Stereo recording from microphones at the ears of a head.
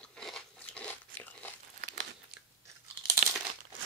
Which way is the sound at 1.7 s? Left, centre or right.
Right.